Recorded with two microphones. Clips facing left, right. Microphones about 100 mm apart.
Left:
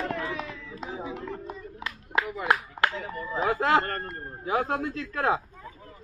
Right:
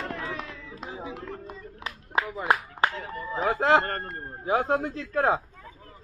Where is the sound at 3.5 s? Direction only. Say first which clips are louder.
Right 3 dB; 25° right (ahead or behind).